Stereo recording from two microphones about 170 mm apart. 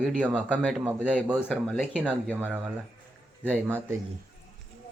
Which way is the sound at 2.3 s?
10° right (ahead or behind).